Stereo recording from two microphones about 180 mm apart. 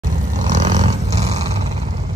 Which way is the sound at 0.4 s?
45° right (ahead or behind).